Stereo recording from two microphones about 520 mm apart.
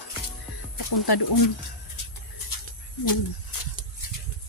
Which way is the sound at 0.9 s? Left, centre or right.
Left.